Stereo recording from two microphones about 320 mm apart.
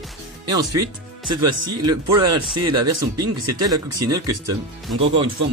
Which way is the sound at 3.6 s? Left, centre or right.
Centre.